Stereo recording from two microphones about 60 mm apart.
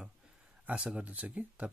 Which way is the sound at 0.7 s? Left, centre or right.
Right.